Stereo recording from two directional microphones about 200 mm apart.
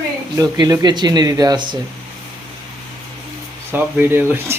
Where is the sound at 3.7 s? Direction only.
10° right (ahead or behind).